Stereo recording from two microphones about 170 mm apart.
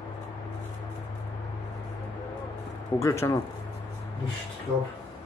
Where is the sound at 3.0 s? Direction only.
15° left (ahead or behind).